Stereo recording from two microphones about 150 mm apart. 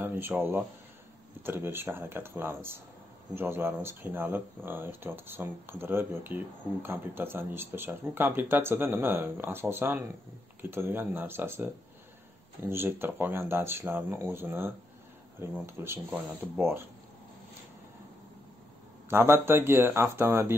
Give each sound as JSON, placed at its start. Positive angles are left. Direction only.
{"t": 0.0, "sound": "speech", "side_deg": -15}
{"t": 19.0, "sound": "speech", "side_deg": -15}